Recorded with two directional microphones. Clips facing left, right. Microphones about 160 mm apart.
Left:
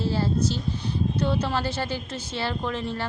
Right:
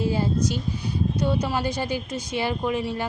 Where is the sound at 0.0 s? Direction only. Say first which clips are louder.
Right 1 dB; 15° right (ahead or behind).